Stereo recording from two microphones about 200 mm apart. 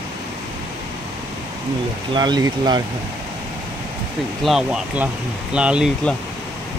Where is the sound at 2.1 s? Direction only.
20° right (ahead or behind).